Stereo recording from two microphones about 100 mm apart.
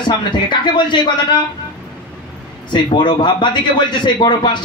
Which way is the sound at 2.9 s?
50° left (ahead or behind).